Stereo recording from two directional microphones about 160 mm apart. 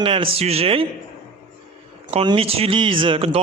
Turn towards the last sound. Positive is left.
turn(degrees=-35)  # may be behind; listen again after turning